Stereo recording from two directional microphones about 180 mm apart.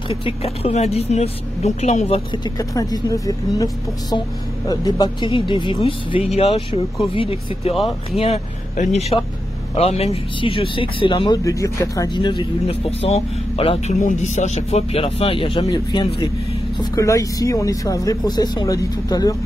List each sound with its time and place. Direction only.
0.1 s speech: 35° left (ahead or behind)
7.7 s speech: centre (ahead or behind)
8.2 s speech: 40° left (ahead or behind); by 19.3 s 20° left (ahead or behind)